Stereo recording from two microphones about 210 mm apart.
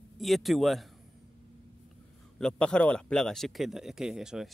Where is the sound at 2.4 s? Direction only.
5° left (ahead or behind).